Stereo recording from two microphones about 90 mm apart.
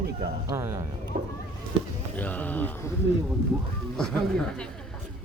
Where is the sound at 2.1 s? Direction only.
20° left (ahead or behind).